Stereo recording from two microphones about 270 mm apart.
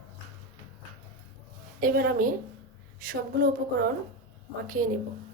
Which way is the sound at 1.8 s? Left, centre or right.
Right.